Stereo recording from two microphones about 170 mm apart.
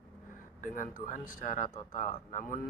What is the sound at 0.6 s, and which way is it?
Speech, 50° left (ahead or behind).